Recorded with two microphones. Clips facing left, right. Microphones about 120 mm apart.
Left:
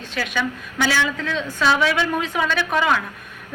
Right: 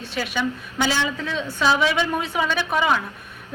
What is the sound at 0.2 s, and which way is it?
A woman's voice, 20° right (ahead or behind).